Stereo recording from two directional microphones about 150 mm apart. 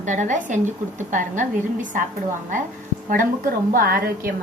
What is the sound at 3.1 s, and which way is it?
A woman's voice, 65° right (ahead or behind).